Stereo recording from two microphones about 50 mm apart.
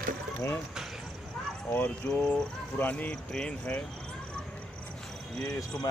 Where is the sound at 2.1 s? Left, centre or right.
Left.